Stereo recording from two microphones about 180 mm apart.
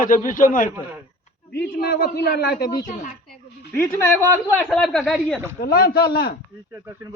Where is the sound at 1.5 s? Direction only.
60° left (ahead or behind).